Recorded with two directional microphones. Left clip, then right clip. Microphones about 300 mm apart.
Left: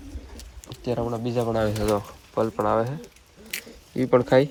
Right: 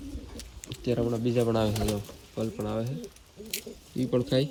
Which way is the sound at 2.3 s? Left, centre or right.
Left.